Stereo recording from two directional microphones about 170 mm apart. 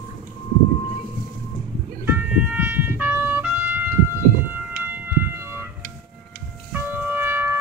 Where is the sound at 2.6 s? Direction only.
10° right (ahead or behind).